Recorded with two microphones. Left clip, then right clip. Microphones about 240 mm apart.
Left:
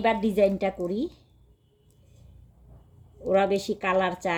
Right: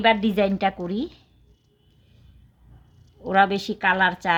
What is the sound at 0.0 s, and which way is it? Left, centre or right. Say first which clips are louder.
Speech: right 3 dB; right.